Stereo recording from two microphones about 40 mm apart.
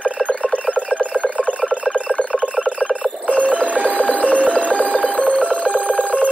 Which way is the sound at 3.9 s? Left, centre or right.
Left.